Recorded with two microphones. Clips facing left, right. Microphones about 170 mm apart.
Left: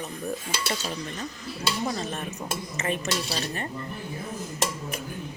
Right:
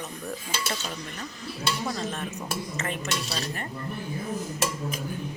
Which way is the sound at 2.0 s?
15° left (ahead or behind).